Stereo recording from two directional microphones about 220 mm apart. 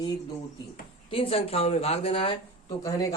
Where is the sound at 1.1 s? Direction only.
25° left (ahead or behind).